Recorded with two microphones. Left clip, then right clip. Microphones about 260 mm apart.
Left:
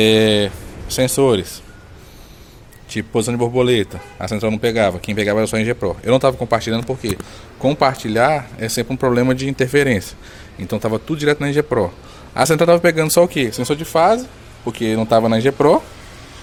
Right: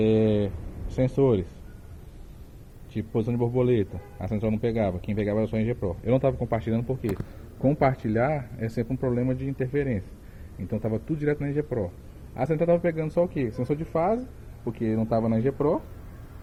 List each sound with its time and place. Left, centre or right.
0.0 s speech: centre
2.9 s a man's voice: centre